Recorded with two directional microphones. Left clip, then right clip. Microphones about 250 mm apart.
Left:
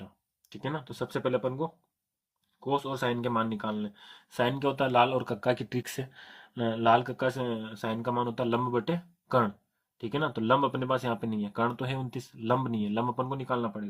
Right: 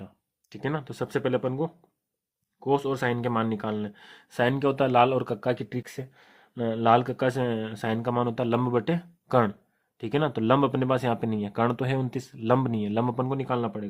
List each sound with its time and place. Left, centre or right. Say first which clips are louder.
0.5 s speech: right 4 dB; right
2.6 s speech: right 4 dB; right